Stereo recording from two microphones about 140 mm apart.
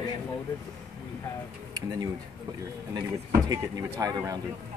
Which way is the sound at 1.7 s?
25° right (ahead or behind).